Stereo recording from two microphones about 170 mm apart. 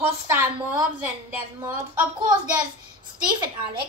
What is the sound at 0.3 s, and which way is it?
Speech, 15° right (ahead or behind).